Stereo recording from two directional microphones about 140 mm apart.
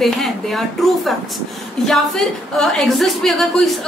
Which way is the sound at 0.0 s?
Centre (ahead or behind).